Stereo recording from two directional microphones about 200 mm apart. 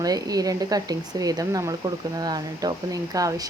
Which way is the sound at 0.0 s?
20° right (ahead or behind).